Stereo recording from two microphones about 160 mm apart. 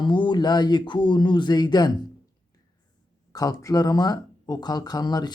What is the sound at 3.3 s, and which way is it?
Speech, 20° left (ahead or behind).